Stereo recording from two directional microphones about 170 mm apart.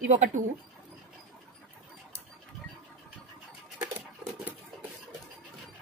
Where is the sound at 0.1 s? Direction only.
45° right (ahead or behind).